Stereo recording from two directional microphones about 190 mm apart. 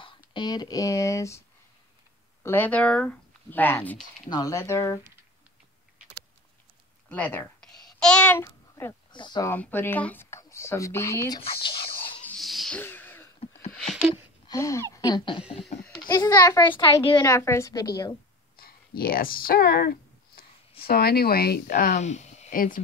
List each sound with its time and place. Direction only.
0.3 s speech: 20° left (ahead or behind)
2.4 s speech: 10° left (ahead or behind)
7.1 s a child's voice: 10° left (ahead or behind)
9.5 s speech: 10° left (ahead or behind); by 12.2 s 30° left (ahead or behind)
12.3 s a sound: centre (ahead or behind)
14.5 s a child's voice: 15° left (ahead or behind)
18.6 s a sound: 50° left (ahead or behind)
20.8 s speech: 55° left (ahead or behind)